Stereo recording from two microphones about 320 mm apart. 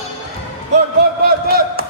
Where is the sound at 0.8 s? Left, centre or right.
Right.